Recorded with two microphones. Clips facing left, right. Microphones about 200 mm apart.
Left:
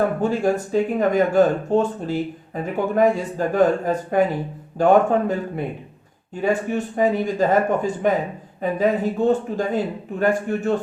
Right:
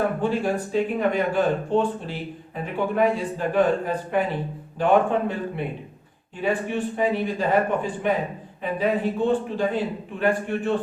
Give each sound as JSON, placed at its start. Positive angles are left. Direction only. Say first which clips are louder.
{"t": 0.2, "sound": "a man's voice", "louder": "left 3 dB", "side_deg": 45}